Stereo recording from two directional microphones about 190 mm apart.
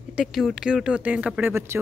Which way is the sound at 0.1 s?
Centre (ahead or behind).